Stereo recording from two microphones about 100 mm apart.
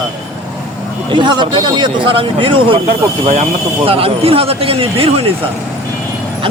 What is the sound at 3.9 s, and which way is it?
Speech, 75° right (ahead or behind).